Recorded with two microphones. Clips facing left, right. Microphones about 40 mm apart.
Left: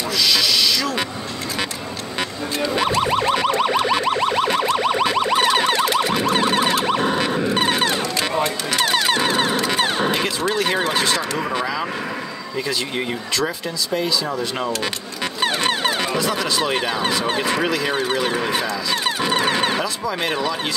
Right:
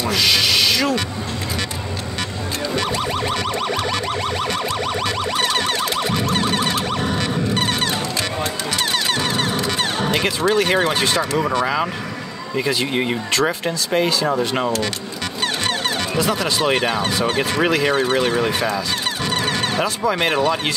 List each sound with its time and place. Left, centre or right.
0.1 s speech: right
3.0 s a sound: centre
6.2 s music: centre
8.7 s a sound: centre
10.2 s speech: centre
11.6 s speech: centre
14.2 s speech: right
15.4 s music: centre
16.2 s speech: centre
18.2 s speech: centre
19.0 s music: centre
19.8 s speech: right